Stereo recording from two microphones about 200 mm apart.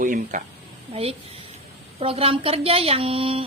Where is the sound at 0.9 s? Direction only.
30° right (ahead or behind).